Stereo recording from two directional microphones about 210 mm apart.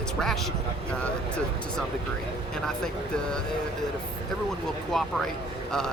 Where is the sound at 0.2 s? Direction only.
Centre (ahead or behind).